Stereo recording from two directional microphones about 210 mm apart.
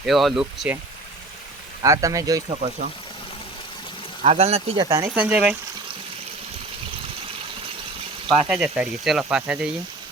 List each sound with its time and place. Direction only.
0.0 s speech: centre (ahead or behind)
1.8 s speech: 15° right (ahead or behind)
4.2 s speech: 30° right (ahead or behind)
4.9 s speech: 20° right (ahead or behind)
5.1 s speech: 5° right (ahead or behind)
8.3 s speech: 5° right (ahead or behind)